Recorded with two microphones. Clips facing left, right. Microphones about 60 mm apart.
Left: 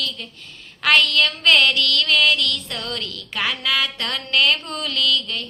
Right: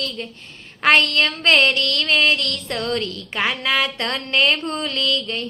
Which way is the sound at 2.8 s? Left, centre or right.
Right.